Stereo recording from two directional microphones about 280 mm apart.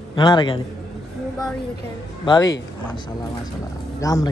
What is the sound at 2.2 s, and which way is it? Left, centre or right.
Speech, centre.